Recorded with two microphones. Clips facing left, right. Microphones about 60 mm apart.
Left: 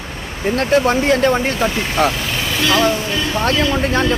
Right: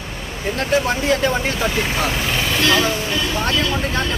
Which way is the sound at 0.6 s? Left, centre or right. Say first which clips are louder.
Left 4 dB; left.